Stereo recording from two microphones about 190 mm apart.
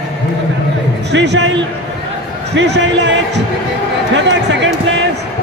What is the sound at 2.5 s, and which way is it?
Speech, 65° right (ahead or behind).